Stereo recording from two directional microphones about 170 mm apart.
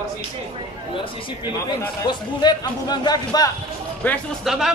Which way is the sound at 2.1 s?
25° left (ahead or behind).